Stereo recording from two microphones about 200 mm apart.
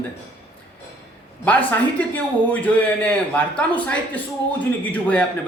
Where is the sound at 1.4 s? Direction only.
10° left (ahead or behind).